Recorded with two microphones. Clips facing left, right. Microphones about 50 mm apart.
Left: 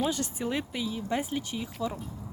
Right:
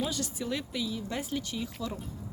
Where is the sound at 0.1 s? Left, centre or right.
Left.